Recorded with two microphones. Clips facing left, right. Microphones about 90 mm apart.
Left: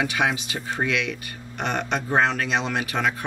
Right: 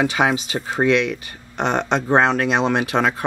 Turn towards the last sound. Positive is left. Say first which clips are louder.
# right 6 dB
turn(degrees=-35)  # may be behind; listen again after turning